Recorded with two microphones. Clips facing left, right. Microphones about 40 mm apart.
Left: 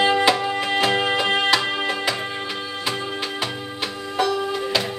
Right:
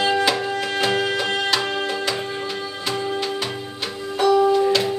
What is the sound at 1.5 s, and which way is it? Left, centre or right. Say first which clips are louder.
Music: left 2 dB; centre.